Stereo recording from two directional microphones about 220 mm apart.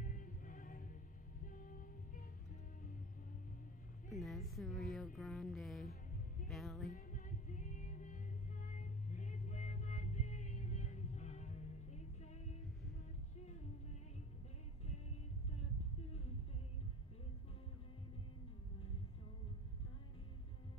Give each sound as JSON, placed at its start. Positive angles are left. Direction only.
{"t": 0.0, "sound": "music", "side_deg": 35}
{"t": 4.2, "sound": "a woman's voice", "side_deg": 0}
{"t": 6.9, "sound": "music", "side_deg": 35}